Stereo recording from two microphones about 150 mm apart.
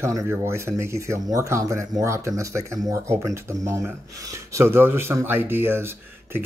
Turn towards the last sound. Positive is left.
turn(degrees=-15)  # may be behind; listen again after turning